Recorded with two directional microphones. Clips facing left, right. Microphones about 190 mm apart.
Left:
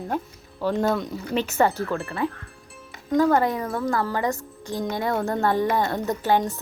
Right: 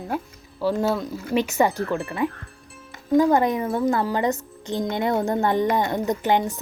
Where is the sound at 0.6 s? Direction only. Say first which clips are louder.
Right 1 dB; 5° right (ahead or behind).